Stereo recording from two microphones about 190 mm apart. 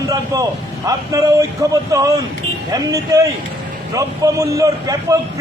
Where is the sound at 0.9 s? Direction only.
15° right (ahead or behind).